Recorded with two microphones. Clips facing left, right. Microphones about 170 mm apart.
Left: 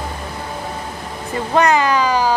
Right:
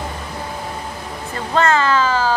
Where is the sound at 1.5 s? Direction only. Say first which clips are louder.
Left 1 dB; 15° left (ahead or behind).